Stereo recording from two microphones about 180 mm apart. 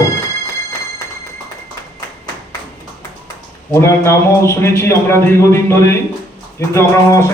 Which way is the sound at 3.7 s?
15° left (ahead or behind).